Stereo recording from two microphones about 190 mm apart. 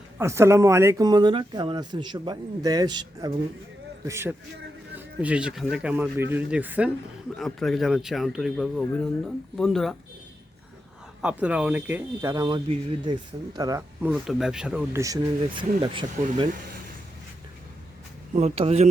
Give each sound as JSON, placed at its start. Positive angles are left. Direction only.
{"t": 0.2, "sound": "speech", "side_deg": -15}
{"t": 11.2, "sound": "speech", "side_deg": -5}
{"t": 14.1, "sound": "speech", "side_deg": 0}
{"t": 18.3, "sound": "speech", "side_deg": -35}